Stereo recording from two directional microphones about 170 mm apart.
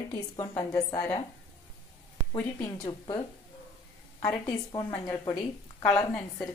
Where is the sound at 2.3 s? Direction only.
20° left (ahead or behind).